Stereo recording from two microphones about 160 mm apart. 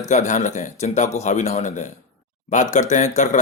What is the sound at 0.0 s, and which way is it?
A man's voice, 50° left (ahead or behind).